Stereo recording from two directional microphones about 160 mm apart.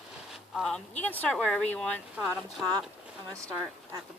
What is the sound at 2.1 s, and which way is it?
Speech, 15° right (ahead or behind).